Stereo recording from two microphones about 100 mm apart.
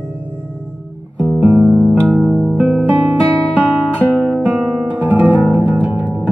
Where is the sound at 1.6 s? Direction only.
15° right (ahead or behind).